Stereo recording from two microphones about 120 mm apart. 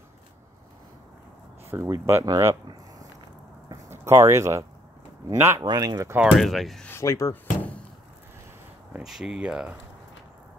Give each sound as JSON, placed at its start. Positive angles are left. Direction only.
{"t": 1.7, "sound": "speech", "side_deg": -20}
{"t": 2.2, "sound": "speech", "side_deg": -35}
{"t": 3.9, "sound": "speech", "side_deg": -25}
{"t": 5.6, "sound": "speech", "side_deg": -35}
{"t": 6.3, "sound": "speech", "side_deg": 0}
{"t": 6.9, "sound": "speech", "side_deg": 25}
{"t": 8.9, "sound": "speech", "side_deg": -5}